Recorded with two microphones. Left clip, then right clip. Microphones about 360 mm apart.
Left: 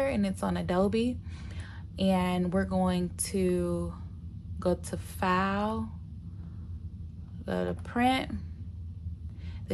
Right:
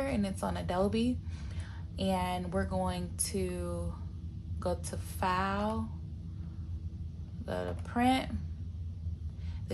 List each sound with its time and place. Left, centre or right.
0.0 s speech: left
7.4 s speech: left